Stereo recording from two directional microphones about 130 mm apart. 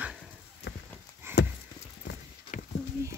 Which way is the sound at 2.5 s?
85° left.